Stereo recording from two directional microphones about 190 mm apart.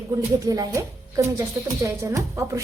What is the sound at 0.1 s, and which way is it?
Speech, 20° right (ahead or behind).